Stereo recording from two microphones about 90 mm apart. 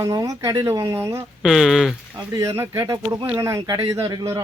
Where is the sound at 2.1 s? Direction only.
40° right (ahead or behind).